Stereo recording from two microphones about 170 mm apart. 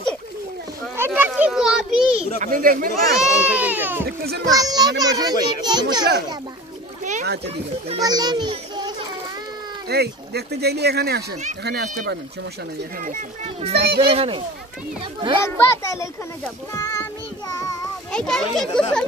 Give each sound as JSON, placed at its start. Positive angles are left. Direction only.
{"t": 0.9, "sound": "children playing", "side_deg": -10}
{"t": 2.4, "sound": "speech", "side_deg": -55}
{"t": 3.2, "sound": "speech", "side_deg": -5}
{"t": 4.6, "sound": "a child's voice", "side_deg": -20}
{"t": 8.0, "sound": "a child's voice", "side_deg": -25}
{"t": 9.8, "sound": "speech", "side_deg": -70}
{"t": 13.6, "sound": "speech", "side_deg": -35}
{"t": 15.4, "sound": "a child's voice", "side_deg": 15}
{"t": 16.7, "sound": "child singing", "side_deg": 20}
{"t": 18.1, "sound": "a child's voice", "side_deg": 5}